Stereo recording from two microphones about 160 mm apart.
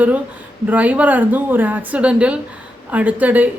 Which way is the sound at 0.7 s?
10° right (ahead or behind).